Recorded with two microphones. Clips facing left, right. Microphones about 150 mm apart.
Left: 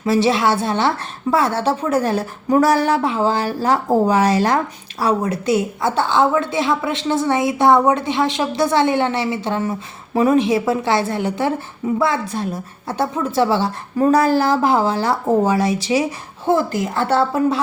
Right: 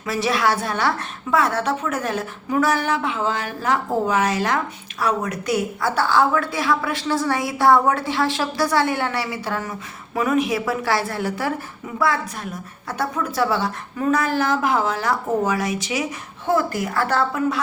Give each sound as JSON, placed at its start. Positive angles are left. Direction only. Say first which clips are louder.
{"t": 0.0, "sound": "a woman's voice", "louder": "left 5 dB", "side_deg": 30}